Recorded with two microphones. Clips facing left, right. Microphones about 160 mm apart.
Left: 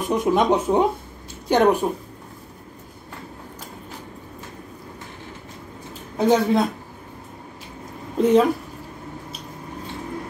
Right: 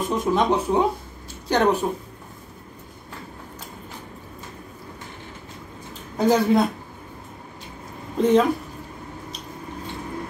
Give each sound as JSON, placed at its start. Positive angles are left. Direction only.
{"t": 0.1, "sound": "a woman's voice", "side_deg": 20}
{"t": 6.1, "sound": "speech", "side_deg": 0}
{"t": 8.2, "sound": "speech", "side_deg": 0}